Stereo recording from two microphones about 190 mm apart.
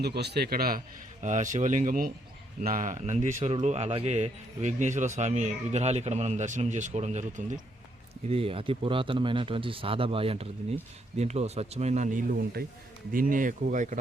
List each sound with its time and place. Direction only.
0.0 s a man's voice: 60° right (ahead or behind)
1.2 s speech: 40° right (ahead or behind)